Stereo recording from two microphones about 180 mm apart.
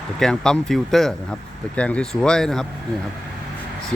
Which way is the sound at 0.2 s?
5° left (ahead or behind).